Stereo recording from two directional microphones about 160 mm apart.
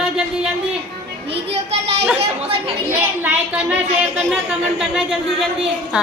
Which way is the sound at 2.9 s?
10° right (ahead or behind).